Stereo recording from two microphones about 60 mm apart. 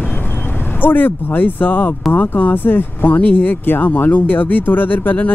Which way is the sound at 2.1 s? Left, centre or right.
Left.